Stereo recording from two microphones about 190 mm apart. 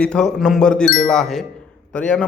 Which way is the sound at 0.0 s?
5° left (ahead or behind).